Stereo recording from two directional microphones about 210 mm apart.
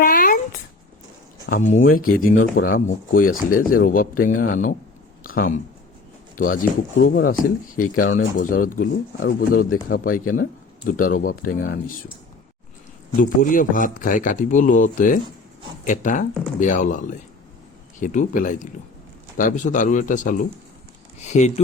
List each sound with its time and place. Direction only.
0.0 s a sound: 40° left (ahead or behind)
1.5 s speech: 40° left (ahead or behind)
2.3 s speech: 65° left (ahead or behind)
2.6 s speech: 40° left (ahead or behind)
13.4 s speech: 40° left (ahead or behind)